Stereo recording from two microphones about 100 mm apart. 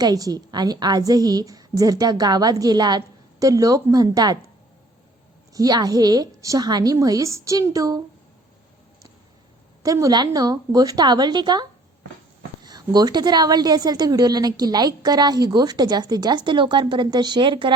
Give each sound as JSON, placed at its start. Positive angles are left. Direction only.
{"t": 0.0, "sound": "a woman's voice", "side_deg": -40}
{"t": 5.5, "sound": "a woman's voice", "side_deg": -40}
{"t": 9.8, "sound": "a woman's voice", "side_deg": -35}
{"t": 12.6, "sound": "a woman's voice", "side_deg": -45}